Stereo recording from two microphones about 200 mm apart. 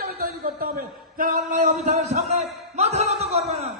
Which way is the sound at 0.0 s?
50° right (ahead or behind).